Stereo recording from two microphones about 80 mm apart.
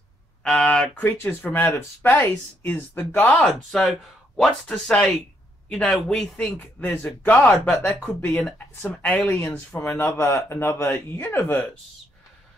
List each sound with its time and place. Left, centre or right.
0.4 s a sound: centre
0.9 s speech: left
3.4 s speech: centre
6.6 s speech: left
7.5 s speech: centre
8.2 s speech: left
8.5 s speech: centre
9.1 s speech: left
9.8 s speech: left